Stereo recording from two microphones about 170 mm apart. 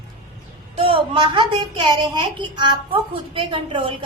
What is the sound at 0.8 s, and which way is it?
Speech, 30° right (ahead or behind).